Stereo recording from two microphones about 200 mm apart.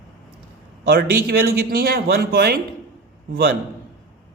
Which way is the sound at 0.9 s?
50° right (ahead or behind).